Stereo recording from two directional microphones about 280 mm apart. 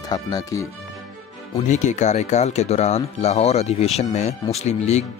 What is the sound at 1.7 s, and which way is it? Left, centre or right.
Speech, left.